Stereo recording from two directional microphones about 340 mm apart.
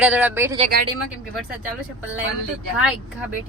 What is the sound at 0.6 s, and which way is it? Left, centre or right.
Speech, right.